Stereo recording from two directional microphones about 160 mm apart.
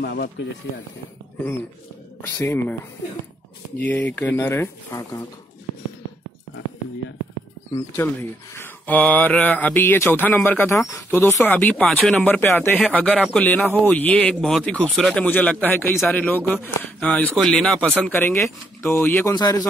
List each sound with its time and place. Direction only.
0.0 s speech: 90° left
2.2 s speech: 15° left (ahead or behind)
3.7 s speech: 10° left (ahead or behind)
7.9 s speech: 15° left (ahead or behind)
19.3 s a man's voice: 25° left (ahead or behind)